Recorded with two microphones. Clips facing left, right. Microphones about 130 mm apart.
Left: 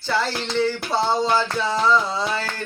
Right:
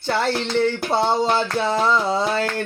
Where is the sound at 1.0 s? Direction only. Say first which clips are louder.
Even; 25° right (ahead or behind).